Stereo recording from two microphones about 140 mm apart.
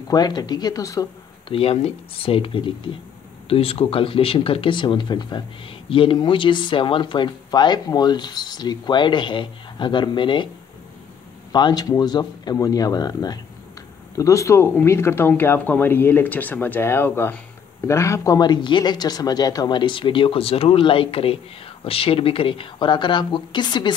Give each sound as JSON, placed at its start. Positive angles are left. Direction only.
{"t": 0.1, "sound": "speech", "side_deg": 30}
{"t": 1.5, "sound": "speech", "side_deg": 45}
{"t": 11.5, "sound": "speech", "side_deg": 30}